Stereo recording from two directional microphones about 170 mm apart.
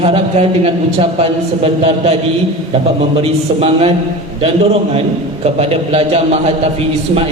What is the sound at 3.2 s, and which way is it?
A man's voice, 35° right (ahead or behind).